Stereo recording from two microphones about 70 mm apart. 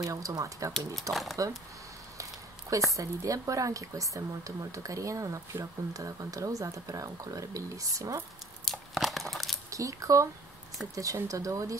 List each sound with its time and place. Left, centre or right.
0.0 s speech: right
1.1 s speech: centre
2.9 s speech: right
8.6 s crumpling: centre
9.7 s speech: right